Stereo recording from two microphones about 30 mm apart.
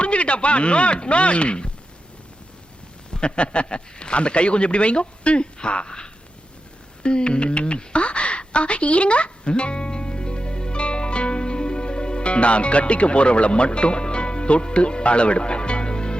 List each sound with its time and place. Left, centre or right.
0.0 s speech: left
3.1 s speech: left
7.0 s a sound: left